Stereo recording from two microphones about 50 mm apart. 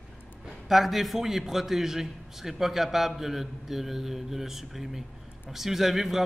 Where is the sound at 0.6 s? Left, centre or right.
Centre.